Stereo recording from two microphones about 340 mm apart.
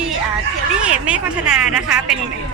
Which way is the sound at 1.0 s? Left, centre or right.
Centre.